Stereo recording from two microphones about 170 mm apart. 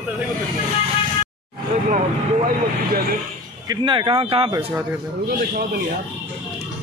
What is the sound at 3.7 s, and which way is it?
Speech, 30° right (ahead or behind).